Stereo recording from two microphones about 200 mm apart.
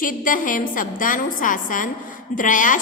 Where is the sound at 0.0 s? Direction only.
45° left (ahead or behind).